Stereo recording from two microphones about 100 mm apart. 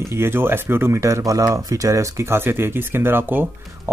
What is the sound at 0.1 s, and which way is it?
Speech, 25° right (ahead or behind).